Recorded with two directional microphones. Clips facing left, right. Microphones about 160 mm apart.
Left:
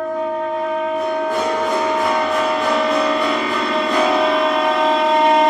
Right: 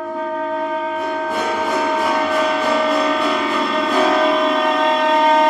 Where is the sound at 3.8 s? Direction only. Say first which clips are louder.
Right 1 dB; centre (ahead or behind).